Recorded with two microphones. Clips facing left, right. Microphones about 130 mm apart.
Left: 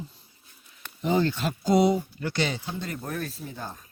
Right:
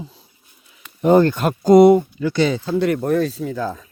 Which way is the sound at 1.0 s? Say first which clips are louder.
Right 11 dB; 55° right (ahead or behind).